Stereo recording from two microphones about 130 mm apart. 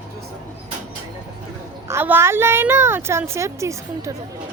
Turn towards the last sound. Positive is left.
turn(degrees=-20)  # may be behind; listen again after turning